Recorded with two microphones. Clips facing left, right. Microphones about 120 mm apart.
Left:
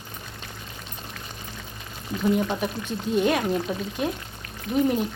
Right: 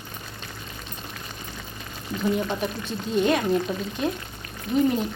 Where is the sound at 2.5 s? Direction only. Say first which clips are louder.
Even; 10° left (ahead or behind).